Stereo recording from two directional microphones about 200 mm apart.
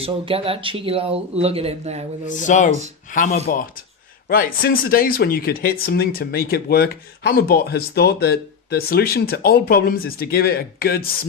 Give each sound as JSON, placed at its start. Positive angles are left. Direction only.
{"t": 0.0, "sound": "speech", "side_deg": -30}
{"t": 2.2, "sound": "speech", "side_deg": 40}
{"t": 4.3, "sound": "speech", "side_deg": 45}